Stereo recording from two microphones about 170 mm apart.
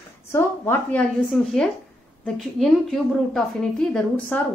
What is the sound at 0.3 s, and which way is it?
A woman's voice, 10° left (ahead or behind).